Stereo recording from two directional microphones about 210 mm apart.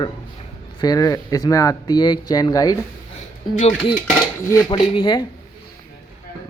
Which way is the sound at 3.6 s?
30° left (ahead or behind).